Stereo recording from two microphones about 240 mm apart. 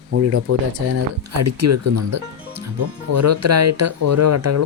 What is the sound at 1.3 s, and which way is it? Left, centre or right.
Speech, right.